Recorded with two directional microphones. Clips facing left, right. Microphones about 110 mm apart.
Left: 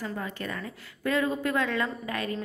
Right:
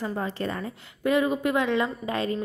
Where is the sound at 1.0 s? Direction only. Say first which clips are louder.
Right 4 dB; 20° right (ahead or behind).